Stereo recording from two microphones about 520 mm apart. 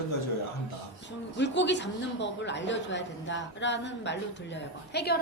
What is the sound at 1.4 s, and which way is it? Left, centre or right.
A woman's voice, centre.